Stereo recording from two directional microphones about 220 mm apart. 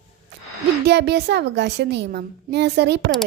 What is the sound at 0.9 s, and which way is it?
A woman's voice, 50° right (ahead or behind).